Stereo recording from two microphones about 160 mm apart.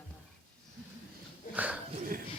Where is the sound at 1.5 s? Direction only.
10° right (ahead or behind).